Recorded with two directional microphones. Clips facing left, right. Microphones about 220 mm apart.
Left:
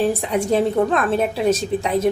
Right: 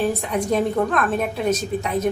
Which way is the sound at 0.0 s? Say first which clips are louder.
Left 3 dB; 30° left (ahead or behind).